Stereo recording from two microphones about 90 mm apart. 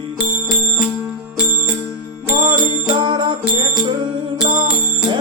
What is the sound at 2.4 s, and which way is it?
Music, 60° right (ahead or behind).